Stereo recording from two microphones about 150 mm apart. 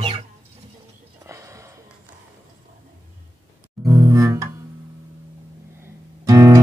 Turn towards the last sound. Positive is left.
turn(degrees=-20)  # may be behind; listen again after turning